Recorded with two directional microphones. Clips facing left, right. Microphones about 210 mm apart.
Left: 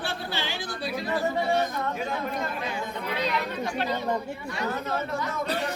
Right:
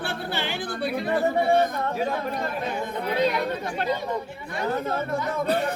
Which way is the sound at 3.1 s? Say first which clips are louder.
Right 6 dB; 50° right (ahead or behind).